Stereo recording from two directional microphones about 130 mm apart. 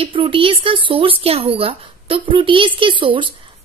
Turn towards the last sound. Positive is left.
turn(degrees=-40)  # may be behind; listen again after turning